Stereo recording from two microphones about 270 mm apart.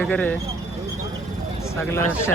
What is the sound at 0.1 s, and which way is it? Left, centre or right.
Speech, centre.